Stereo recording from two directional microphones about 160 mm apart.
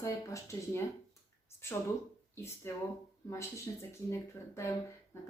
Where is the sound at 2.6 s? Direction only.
15° left (ahead or behind).